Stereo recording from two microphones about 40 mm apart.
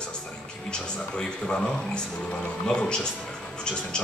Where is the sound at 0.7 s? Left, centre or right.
Left.